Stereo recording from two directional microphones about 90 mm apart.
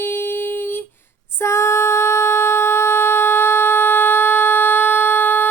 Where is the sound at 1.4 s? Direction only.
30° left (ahead or behind).